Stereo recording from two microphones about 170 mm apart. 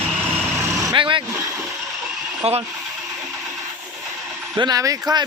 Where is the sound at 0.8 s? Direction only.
20° right (ahead or behind).